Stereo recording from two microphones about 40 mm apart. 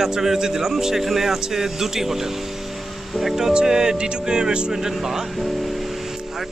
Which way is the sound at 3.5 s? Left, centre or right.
Centre.